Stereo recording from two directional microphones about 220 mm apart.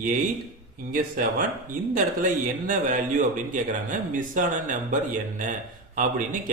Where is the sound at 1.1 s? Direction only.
40° right (ahead or behind).